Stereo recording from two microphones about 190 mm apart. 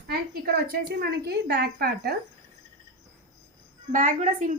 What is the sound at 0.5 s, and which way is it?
A woman's voice, 55° right (ahead or behind).